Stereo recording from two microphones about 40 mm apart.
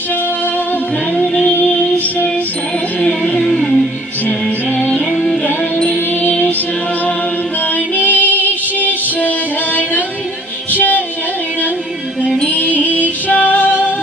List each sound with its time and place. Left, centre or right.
1.2 s music: centre
3.0 s music: left
3.4 s music: centre
7.6 s music: left
12.4 s music: left